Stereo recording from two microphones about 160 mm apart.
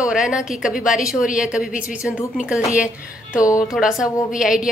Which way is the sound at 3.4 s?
20° left (ahead or behind).